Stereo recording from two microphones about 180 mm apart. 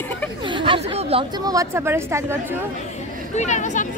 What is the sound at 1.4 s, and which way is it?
Speech, 20° right (ahead or behind).